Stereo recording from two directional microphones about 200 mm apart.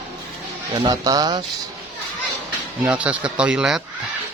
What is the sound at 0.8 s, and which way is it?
Speech, 20° right (ahead or behind).